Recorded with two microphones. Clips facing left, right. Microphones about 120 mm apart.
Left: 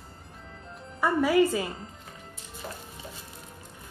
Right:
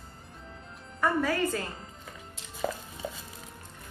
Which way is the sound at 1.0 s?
10° left (ahead or behind).